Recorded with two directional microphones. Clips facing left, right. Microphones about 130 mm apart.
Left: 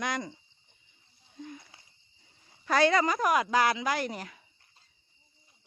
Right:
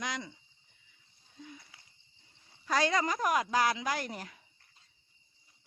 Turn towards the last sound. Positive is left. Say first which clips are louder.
# left 4 dB
turn(degrees=90)